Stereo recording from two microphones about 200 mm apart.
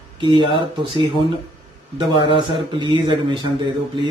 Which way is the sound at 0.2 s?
25° right (ahead or behind).